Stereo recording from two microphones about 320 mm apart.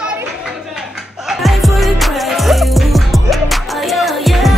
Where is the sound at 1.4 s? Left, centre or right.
Centre.